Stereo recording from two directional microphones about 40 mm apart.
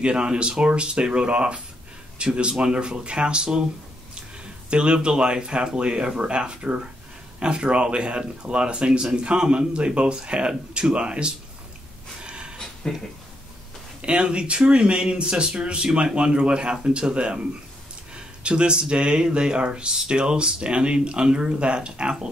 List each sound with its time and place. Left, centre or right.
0.0 s speech: right
4.6 s speech: right
12.2 s snort: right
12.8 s speech: centre
14.0 s speech: right